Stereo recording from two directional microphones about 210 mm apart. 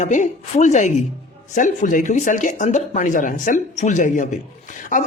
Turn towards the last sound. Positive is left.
turn(degrees=40)  # may be behind; listen again after turning